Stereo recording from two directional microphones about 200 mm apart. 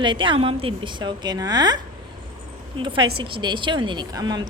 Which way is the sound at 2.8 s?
25° right (ahead or behind).